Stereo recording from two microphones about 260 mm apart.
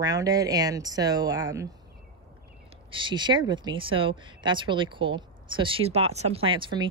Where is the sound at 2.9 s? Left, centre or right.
Centre.